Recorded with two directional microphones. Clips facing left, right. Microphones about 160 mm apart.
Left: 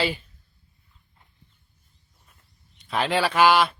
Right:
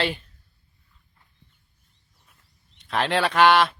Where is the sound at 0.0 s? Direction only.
Centre (ahead or behind).